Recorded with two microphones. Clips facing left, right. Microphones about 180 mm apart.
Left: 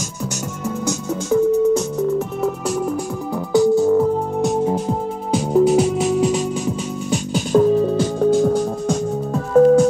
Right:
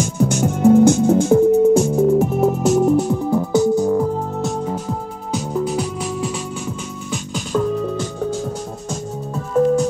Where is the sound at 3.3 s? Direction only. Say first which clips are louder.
Left 2 dB; 20° right (ahead or behind).